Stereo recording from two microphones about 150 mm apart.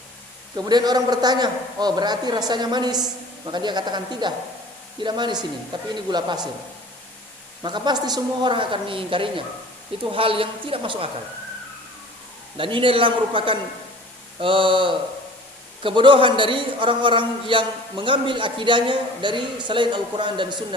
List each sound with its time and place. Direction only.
0.5 s a man's voice: 25° right (ahead or behind)
7.6 s a man's voice: 30° right (ahead or behind)
12.5 s a man's voice: 35° right (ahead or behind)